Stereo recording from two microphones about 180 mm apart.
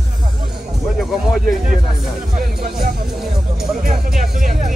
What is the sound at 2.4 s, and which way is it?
Speech, 55° right (ahead or behind).